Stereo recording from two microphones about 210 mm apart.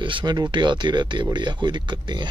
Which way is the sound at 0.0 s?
20° right (ahead or behind).